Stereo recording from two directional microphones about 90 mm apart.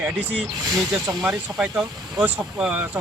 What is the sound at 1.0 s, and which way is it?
Speech, 45° right (ahead or behind).